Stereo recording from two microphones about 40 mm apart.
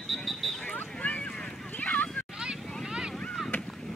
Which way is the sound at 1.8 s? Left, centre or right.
Left.